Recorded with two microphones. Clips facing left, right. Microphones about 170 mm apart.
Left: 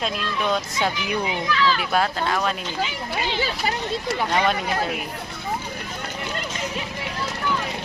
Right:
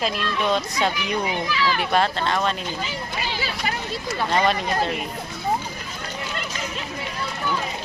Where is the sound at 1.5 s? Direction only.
10° right (ahead or behind).